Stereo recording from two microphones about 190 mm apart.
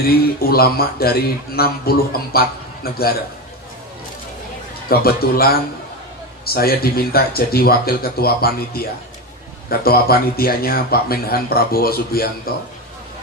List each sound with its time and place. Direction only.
0.3 s a man's voice: 55° left (ahead or behind)
4.9 s speech: 55° left (ahead or behind)